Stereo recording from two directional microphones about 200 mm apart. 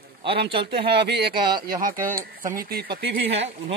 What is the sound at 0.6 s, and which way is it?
Speech, 55° right (ahead or behind).